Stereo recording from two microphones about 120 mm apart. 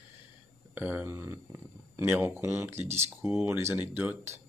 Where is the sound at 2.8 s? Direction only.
65° right (ahead or behind).